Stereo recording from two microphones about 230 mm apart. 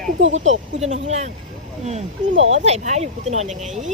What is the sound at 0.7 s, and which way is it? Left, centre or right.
Speech, right.